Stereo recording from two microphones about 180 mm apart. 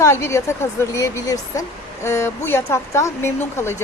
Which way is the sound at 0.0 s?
15° left (ahead or behind).